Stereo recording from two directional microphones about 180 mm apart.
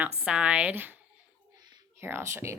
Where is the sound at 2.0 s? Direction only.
10° right (ahead or behind).